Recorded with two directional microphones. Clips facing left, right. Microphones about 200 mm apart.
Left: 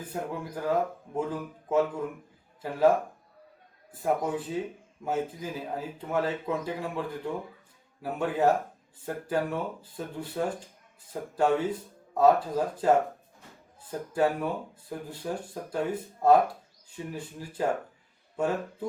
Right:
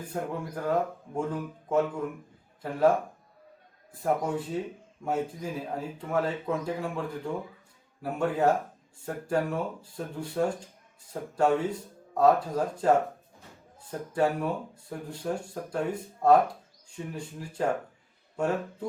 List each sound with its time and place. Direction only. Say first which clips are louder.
0.1 s speech: right 1 dB; 5° left (ahead or behind)
4.0 s speech: even; 5° left (ahead or behind)
14.1 s speech: even; centre (ahead or behind)